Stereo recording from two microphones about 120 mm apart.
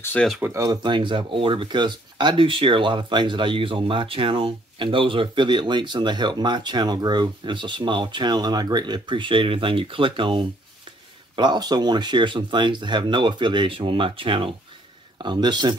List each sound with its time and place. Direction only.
0.0 s speech: 15° left (ahead or behind)
0.5 s speech: 30° right (ahead or behind)
0.8 s speech: 40° right (ahead or behind)